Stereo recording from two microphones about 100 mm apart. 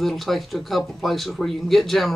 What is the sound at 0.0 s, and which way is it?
Speech, centre (ahead or behind).